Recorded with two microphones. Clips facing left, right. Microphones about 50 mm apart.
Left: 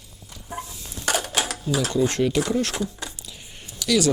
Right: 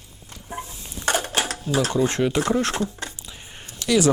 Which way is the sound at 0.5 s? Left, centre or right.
Right.